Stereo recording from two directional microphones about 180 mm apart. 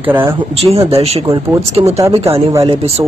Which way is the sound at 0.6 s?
35° right (ahead or behind).